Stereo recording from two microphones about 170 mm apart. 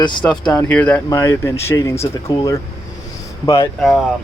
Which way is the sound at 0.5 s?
10° left (ahead or behind).